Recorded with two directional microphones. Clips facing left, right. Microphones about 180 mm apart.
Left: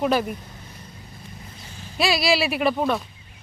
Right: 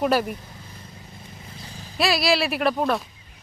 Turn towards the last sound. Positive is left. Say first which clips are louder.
# even
turn(degrees=0)  # may be behind; listen again after turning